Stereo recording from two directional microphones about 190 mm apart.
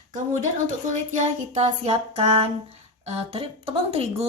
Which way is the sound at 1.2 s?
35° right (ahead or behind).